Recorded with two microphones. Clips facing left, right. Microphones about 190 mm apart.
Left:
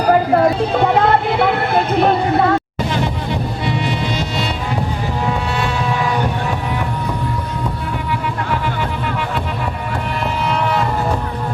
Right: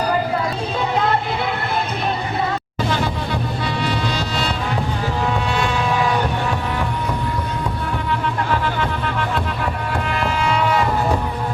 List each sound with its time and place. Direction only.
0.3 s music: 60° left (ahead or behind)
3.8 s music: 20° left (ahead or behind)
10.5 s a sound: centre (ahead or behind)